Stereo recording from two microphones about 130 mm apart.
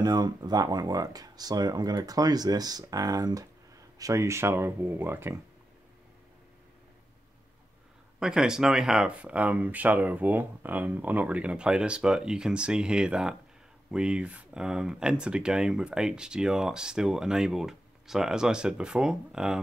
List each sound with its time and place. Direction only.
0.0 s speech: 30° right (ahead or behind)
8.2 s speech: 5° right (ahead or behind)